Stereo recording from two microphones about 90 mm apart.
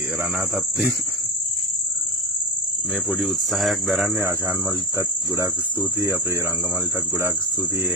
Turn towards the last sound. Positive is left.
turn(degrees=-20)  # may be behind; listen again after turning